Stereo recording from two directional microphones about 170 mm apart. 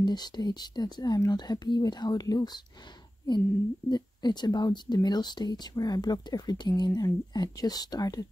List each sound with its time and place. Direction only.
0.0 s speech: 25° left (ahead or behind)
3.9 s speech: 25° left (ahead or behind)